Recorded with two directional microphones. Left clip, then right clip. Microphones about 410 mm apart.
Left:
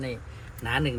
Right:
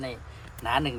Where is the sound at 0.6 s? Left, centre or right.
Centre.